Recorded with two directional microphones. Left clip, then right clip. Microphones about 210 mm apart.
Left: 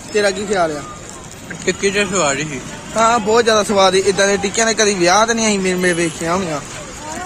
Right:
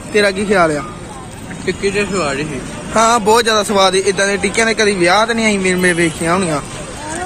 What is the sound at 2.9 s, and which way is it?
Speech, 15° right (ahead or behind).